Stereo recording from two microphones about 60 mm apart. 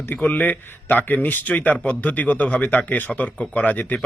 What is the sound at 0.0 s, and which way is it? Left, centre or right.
A man's voice, left.